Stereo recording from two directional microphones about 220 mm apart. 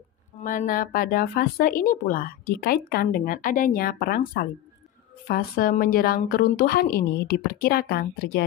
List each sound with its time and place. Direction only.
0.4 s a woman's voice: 35° left (ahead or behind)